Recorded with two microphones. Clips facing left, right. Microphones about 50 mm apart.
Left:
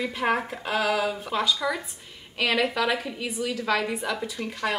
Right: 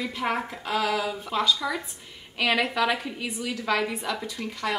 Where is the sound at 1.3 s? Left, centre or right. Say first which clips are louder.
Even; centre.